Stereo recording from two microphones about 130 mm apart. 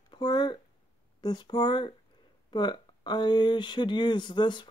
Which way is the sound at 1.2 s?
35° left (ahead or behind).